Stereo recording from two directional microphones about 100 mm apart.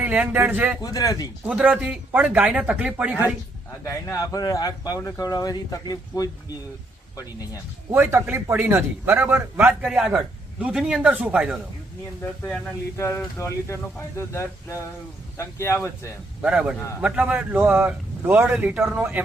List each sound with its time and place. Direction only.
0.0 s speech: 15° right (ahead or behind)
0.8 s speech: 40° left (ahead or behind)
1.5 s speech: 10° right (ahead or behind)
3.8 s speech: 30° left (ahead or behind)
5.2 s speech: 40° left (ahead or behind)
7.9 s a man's voice: 25° right (ahead or behind)
9.8 s speech: 10° right (ahead or behind)
12.2 s speech: 20° left (ahead or behind)
16.4 s speech: 10° right (ahead or behind)
18.5 s speech: 10° right (ahead or behind)